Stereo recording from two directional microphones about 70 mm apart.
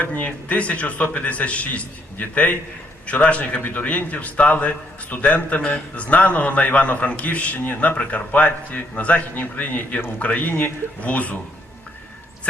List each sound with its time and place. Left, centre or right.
0.0 s a man's voice: left